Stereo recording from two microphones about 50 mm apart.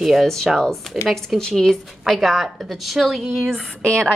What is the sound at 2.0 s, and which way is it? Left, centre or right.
A woman's voice, centre.